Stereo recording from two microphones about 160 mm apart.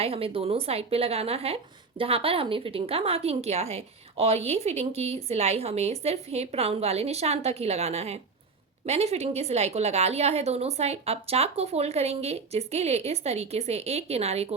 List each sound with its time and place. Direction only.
0.0 s a woman's voice: 35° right (ahead or behind)